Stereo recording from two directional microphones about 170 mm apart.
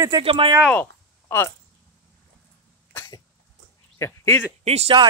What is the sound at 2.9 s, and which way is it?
Cough, 20° left (ahead or behind).